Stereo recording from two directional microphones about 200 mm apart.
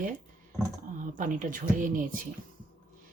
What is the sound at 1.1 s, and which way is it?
Speech, 40° right (ahead or behind).